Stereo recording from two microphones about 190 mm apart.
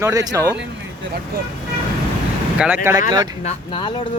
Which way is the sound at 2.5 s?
5° right (ahead or behind).